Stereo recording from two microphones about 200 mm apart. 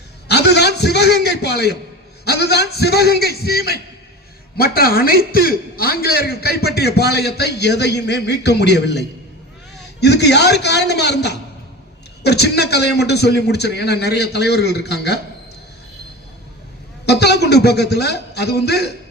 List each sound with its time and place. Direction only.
0.3 s a man's voice: 55° left (ahead or behind)
17.1 s a man's voice: 55° left (ahead or behind)